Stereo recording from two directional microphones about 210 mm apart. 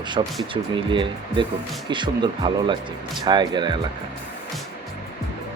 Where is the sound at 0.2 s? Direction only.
25° right (ahead or behind).